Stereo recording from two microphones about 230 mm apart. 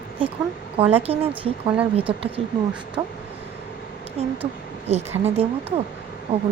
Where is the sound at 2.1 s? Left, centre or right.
Right.